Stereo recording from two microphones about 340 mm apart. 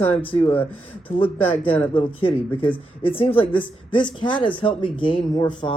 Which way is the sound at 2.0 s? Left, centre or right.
Centre.